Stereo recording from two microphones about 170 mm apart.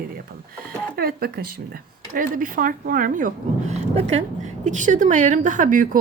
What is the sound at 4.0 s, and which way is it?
A woman's voice, 40° right (ahead or behind).